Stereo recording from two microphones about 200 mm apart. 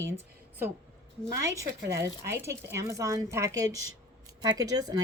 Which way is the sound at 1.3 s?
15° right (ahead or behind).